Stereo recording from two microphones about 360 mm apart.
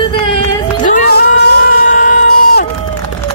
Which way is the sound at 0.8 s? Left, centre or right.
Left.